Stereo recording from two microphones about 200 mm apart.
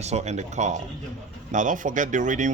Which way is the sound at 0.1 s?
35° right (ahead or behind).